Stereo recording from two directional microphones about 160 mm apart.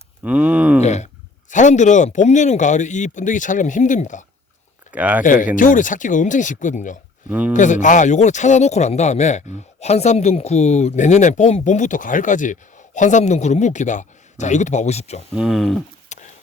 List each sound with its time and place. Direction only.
0.2 s a sound: 10° right (ahead or behind)
0.8 s speech: 45° left (ahead or behind)
4.9 s speech: 10° right (ahead or behind)
5.2 s speech: 55° left (ahead or behind)
7.3 s speech: 10° right (ahead or behind)
7.5 s speech: 50° left (ahead or behind)
15.4 s speech: centre (ahead or behind)
16.1 s a sound: 50° left (ahead or behind)